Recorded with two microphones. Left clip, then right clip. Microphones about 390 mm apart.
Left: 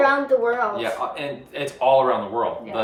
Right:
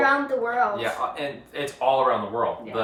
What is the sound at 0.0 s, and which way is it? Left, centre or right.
A woman's voice, centre.